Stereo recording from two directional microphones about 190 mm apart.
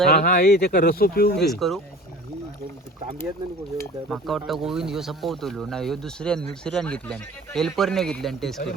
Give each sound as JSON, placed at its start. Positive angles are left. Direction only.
{"t": 0.1, "sound": "speech", "side_deg": 45}
{"t": 1.5, "sound": "speech", "side_deg": 0}
{"t": 4.1, "sound": "speech", "side_deg": 0}